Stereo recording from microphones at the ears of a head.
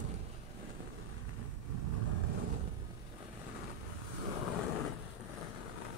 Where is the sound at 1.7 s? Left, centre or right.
Right.